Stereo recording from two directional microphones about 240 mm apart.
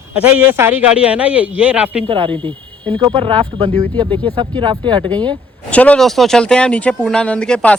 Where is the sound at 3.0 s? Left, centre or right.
Right.